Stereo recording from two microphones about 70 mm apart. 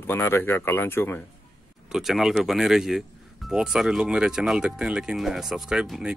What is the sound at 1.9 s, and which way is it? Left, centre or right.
Speech, centre.